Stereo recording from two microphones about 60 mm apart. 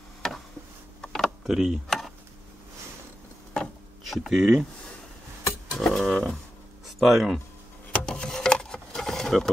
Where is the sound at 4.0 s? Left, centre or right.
Centre.